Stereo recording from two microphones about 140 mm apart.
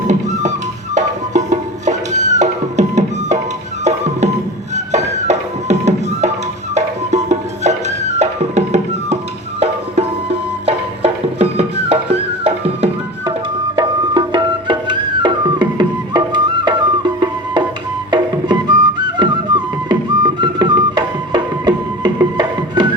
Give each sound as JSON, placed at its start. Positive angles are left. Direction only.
{"t": 0.1, "sound": "music", "side_deg": -60}
{"t": 13.7, "sound": "music", "side_deg": -30}